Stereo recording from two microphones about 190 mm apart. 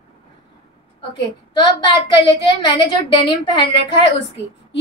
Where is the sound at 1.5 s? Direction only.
25° left (ahead or behind).